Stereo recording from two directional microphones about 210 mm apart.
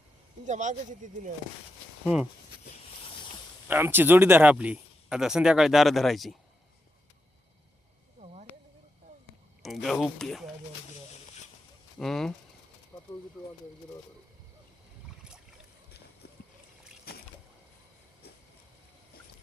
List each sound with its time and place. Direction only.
0.4 s speech: 35° right (ahead or behind)
3.7 s speech: 10° right (ahead or behind)
8.2 s a sound: 30° right (ahead or behind)
9.6 s speech: centre (ahead or behind)
11.9 s speech: centre (ahead or behind)
12.9 s bird: 10° left (ahead or behind)
17.1 s rowboat: 50° left (ahead or behind)